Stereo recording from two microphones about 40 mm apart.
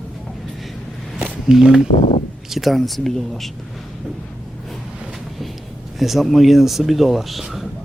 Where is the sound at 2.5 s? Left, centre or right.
Centre.